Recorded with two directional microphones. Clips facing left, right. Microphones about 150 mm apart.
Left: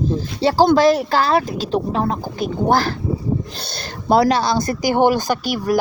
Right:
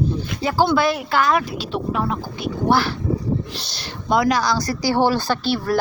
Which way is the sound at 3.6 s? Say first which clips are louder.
Left 6 dB; 55° left (ahead or behind).